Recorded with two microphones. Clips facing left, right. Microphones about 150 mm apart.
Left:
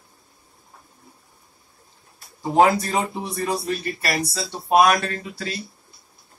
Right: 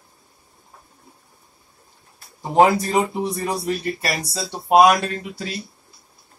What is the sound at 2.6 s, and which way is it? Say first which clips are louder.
Speech: right 2 dB; 20° right (ahead or behind).